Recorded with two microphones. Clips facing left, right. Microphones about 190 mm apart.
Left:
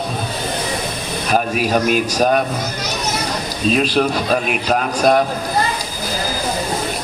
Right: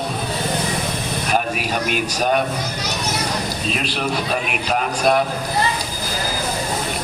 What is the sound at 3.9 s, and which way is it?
A man's voice, 40° left (ahead or behind).